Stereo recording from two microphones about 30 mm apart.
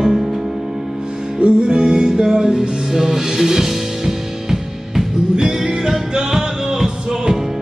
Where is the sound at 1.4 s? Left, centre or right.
Right.